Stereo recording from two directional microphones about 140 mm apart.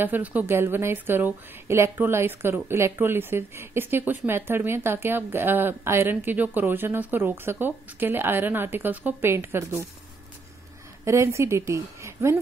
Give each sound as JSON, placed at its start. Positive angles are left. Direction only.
{"t": 0.0, "sound": "a woman's voice", "side_deg": -10}
{"t": 11.1, "sound": "a woman's voice", "side_deg": -20}